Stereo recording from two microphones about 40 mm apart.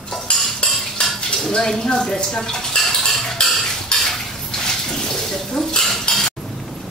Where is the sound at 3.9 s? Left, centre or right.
Left.